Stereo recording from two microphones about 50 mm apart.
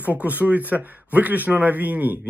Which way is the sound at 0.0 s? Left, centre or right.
Right.